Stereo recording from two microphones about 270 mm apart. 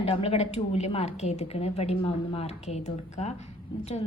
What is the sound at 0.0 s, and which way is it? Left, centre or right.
A woman's voice, left.